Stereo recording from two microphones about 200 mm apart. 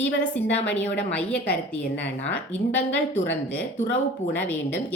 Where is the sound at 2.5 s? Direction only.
65° left (ahead or behind).